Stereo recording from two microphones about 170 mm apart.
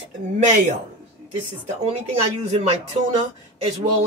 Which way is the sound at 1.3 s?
40° right (ahead or behind).